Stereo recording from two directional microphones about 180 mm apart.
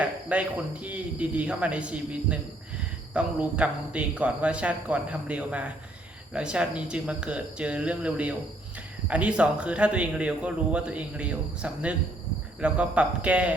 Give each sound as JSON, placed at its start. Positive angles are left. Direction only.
{"t": 0.0, "sound": "speech", "side_deg": -5}